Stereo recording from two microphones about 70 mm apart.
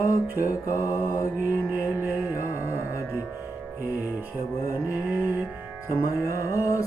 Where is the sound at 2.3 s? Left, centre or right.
Left.